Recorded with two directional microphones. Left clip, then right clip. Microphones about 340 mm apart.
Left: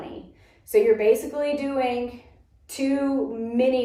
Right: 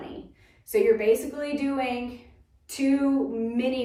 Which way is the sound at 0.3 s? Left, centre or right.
Centre.